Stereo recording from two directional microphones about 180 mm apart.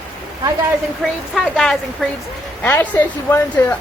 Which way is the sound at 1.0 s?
Centre (ahead or behind).